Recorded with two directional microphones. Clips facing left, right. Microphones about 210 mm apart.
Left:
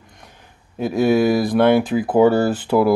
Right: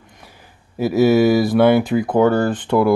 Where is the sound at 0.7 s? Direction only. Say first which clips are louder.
Right 3 dB; 5° right (ahead or behind).